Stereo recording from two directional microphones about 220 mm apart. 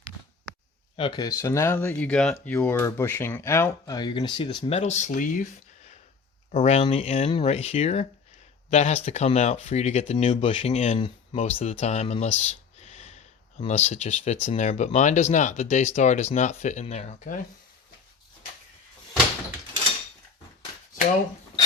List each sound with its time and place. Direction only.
0.9 s speech: 20° left (ahead or behind)
6.5 s speech: 30° left (ahead or behind)
12.5 s a sound: 30° left (ahead or behind)
13.6 s speech: 30° left (ahead or behind)